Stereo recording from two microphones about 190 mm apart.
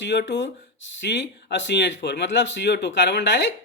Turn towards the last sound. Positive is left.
turn(degrees=65)  # may be behind; listen again after turning